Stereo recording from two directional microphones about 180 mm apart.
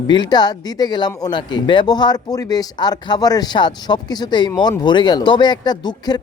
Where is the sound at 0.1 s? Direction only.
25° left (ahead or behind).